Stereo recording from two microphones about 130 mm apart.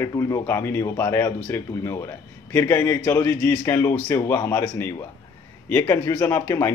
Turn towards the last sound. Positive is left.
turn(degrees=20)  # may be behind; listen again after turning